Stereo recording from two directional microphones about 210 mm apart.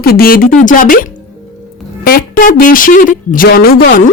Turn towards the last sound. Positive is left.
turn(degrees=45)  # may be behind; listen again after turning